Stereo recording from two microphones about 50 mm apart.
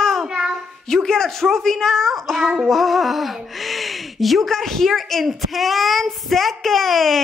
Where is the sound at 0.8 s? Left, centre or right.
Centre.